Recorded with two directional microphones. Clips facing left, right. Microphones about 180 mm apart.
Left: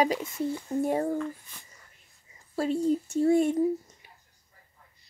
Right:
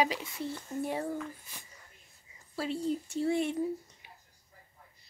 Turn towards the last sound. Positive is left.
turn(degrees=45)  # may be behind; listen again after turning